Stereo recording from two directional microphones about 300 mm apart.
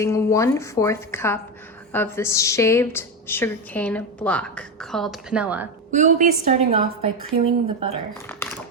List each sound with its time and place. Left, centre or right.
0.0 s a woman's voice: centre
5.9 s a woman's voice: right
8.3 s a sound: centre